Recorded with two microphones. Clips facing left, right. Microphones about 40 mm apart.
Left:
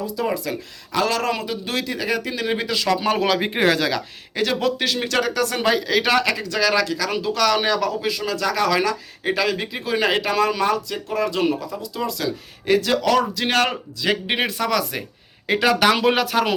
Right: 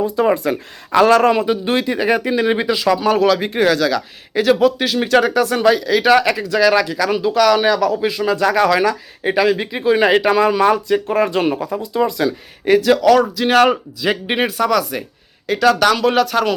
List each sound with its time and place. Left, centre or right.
0.0 s a man's voice: right
2.7 s speech: centre
3.0 s speech: centre
4.4 s speech: centre
5.5 s a man's voice: centre
6.1 s speech: centre
8.0 s speech: centre
10.7 s speech: right
11.9 s a man's voice: right
12.6 s a man's voice: centre
15.4 s speech: centre